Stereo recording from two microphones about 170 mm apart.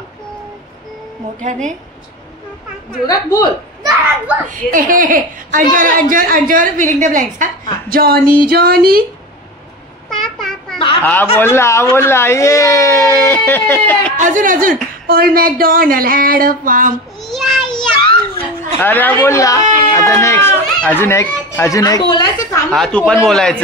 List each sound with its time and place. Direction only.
1.4 s speech: 45° right (ahead or behind)
3.1 s speech: 20° left (ahead or behind)
4.5 s speech: 50° right (ahead or behind)
7.9 s speech: 60° right (ahead or behind)
10.0 s vehicle: centre (ahead or behind)
11.0 s speech: 10° left (ahead or behind)
14.1 s speech: 50° right (ahead or behind)
17.2 s child singing: centre (ahead or behind)
18.8 s speech: 10° left (ahead or behind)
22.7 s speech: 5° left (ahead or behind)